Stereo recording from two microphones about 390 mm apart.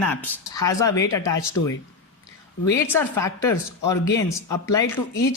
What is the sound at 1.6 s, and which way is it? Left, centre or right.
Speech, left.